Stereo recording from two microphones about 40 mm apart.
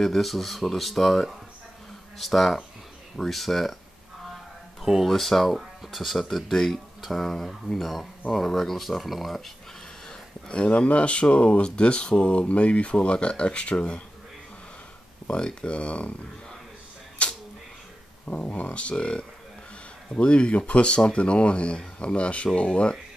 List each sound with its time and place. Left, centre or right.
0.0 s speech: centre
4.8 s speech: centre
10.5 s speech: left
15.3 s speech: left
17.2 s a sound: left
18.2 s speech: left